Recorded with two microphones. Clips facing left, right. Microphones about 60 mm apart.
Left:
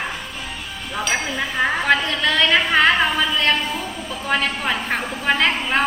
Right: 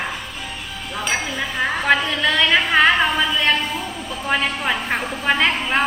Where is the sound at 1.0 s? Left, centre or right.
Centre.